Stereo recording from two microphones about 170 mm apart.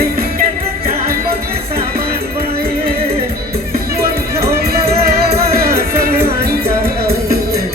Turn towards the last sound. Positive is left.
turn(degrees=-60)  # may be behind; listen again after turning